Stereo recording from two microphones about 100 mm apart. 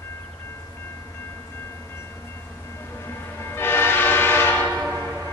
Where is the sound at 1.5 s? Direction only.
25° left (ahead or behind).